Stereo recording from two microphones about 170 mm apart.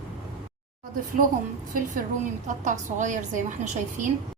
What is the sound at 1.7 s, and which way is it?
A woman's voice, 50° right (ahead or behind).